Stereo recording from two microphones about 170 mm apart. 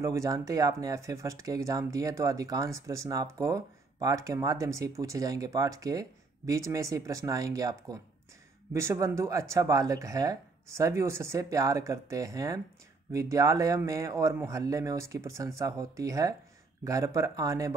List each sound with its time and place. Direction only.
0.0 s speech: 20° right (ahead or behind)